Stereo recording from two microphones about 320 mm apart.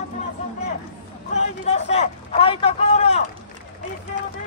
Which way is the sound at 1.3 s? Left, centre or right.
Left.